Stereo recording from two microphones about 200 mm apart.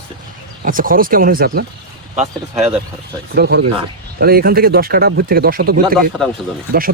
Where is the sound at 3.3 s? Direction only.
55° right (ahead or behind).